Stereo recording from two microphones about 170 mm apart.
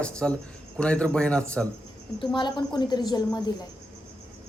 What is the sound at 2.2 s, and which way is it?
A woman's voice, 25° left (ahead or behind).